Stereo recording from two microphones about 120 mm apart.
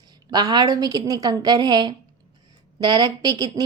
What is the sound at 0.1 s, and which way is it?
A woman's voice, 35° right (ahead or behind).